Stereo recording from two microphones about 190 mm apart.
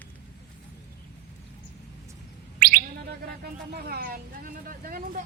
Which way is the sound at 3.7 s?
55° right (ahead or behind).